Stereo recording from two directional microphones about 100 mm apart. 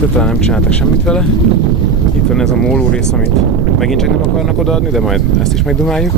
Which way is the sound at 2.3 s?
10° left (ahead or behind).